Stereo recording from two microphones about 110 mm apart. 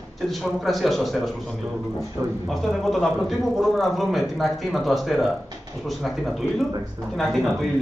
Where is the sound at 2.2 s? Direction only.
25° right (ahead or behind).